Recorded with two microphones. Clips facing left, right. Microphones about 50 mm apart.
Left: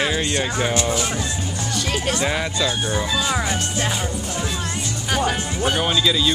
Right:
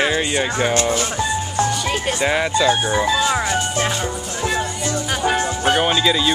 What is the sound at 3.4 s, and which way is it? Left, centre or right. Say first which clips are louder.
Speech: right 4 dB; right.